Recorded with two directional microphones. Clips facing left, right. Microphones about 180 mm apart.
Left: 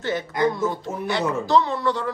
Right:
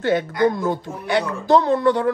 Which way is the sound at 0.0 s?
60° right (ahead or behind).